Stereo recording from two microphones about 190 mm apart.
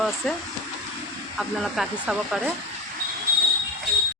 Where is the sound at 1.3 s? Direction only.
Centre (ahead or behind).